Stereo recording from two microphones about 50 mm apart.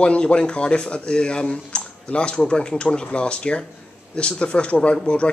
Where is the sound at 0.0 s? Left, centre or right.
Left.